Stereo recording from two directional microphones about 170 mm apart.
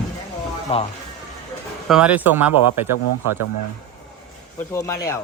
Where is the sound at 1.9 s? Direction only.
5° right (ahead or behind).